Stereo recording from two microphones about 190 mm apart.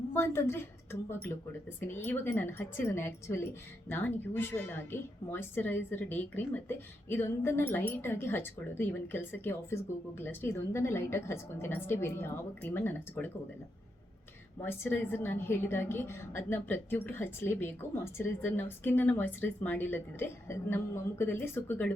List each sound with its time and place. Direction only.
0.1 s a woman's voice: 15° left (ahead or behind)
14.6 s a woman's voice: 10° left (ahead or behind)